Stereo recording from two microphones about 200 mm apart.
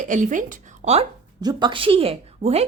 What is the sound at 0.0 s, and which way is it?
A woman's voice, 40° right (ahead or behind).